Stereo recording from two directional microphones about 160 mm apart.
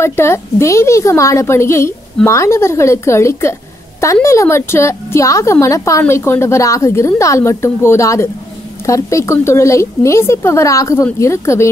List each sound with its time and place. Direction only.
0.0 s a woman's voice: 15° left (ahead or behind)